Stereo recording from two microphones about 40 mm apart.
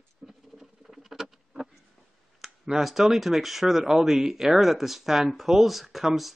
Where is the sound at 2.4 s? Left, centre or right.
Centre.